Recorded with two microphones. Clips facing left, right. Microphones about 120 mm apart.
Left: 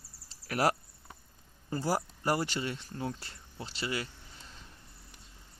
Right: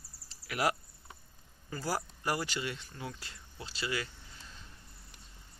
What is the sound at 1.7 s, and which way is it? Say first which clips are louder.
Speech: left 4 dB; 25° left (ahead or behind).